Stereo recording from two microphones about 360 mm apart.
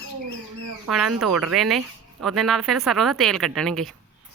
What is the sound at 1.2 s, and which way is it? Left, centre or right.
Speech, centre.